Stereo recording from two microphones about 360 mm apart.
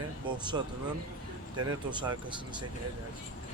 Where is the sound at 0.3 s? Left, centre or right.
Centre.